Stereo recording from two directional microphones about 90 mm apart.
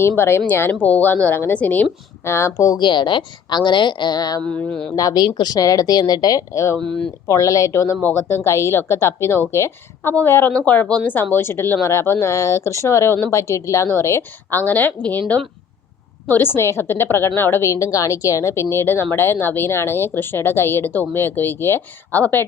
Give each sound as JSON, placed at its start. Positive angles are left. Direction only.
{"t": 0.2, "sound": "speech", "side_deg": 25}
{"t": 2.2, "sound": "a woman's voice", "side_deg": 30}
{"t": 2.7, "sound": "a woman's voice", "side_deg": 55}
{"t": 4.4, "sound": "speech", "side_deg": 15}
{"t": 4.9, "sound": "a woman's voice", "side_deg": 40}
{"t": 5.2, "sound": "a woman's voice", "side_deg": 55}
{"t": 10.5, "sound": "speech", "side_deg": 15}
{"t": 16.2, "sound": "speech", "side_deg": 25}